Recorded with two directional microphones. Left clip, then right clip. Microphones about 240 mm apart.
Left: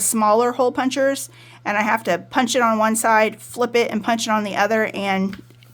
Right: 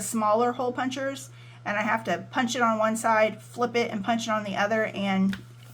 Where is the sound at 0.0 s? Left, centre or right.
Left.